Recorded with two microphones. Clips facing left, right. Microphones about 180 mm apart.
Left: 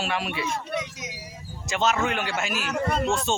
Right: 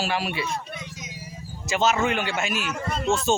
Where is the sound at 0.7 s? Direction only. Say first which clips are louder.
Left 7 dB; 80° left.